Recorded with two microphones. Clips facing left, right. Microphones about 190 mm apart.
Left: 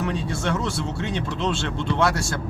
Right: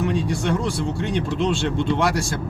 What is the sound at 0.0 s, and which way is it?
Speech, 15° right (ahead or behind).